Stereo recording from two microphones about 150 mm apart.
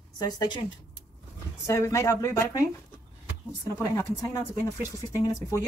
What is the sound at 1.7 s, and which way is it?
Speech, 20° left (ahead or behind).